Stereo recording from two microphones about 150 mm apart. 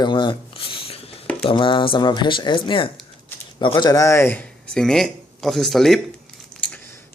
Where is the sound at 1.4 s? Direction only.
35° left (ahead or behind); by 6.0 s centre (ahead or behind).